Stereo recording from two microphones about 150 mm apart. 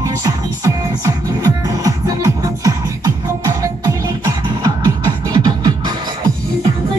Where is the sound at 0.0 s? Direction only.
20° right (ahead or behind).